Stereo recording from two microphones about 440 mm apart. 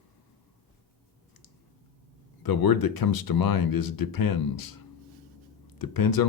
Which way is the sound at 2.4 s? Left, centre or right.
Left.